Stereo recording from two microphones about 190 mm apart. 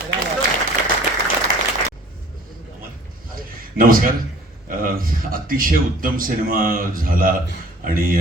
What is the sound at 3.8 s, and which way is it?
A man's voice, 50° right (ahead or behind).